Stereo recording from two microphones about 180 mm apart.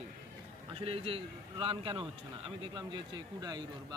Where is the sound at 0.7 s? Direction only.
30° right (ahead or behind).